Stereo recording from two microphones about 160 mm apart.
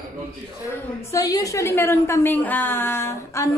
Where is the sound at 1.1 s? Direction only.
20° left (ahead or behind).